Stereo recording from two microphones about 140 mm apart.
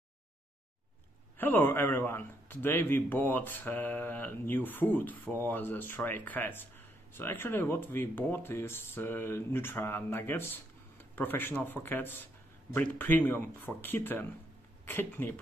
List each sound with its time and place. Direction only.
1.4 s a man's voice: 15° left (ahead or behind)